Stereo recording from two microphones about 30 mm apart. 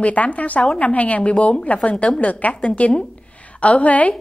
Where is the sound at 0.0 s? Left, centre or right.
Left.